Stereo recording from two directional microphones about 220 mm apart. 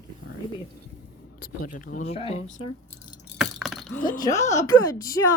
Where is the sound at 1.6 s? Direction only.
35° left (ahead or behind).